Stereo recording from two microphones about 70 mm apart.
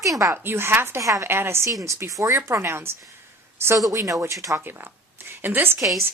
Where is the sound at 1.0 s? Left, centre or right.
Right.